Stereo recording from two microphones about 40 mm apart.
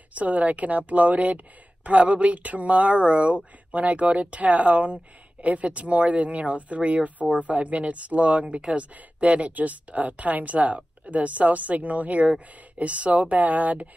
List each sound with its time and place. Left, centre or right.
0.1 s speech: right